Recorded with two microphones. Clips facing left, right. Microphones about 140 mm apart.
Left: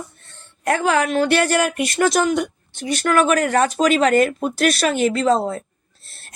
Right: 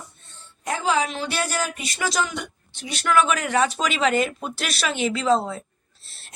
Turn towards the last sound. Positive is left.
turn(degrees=45)  # may be behind; listen again after turning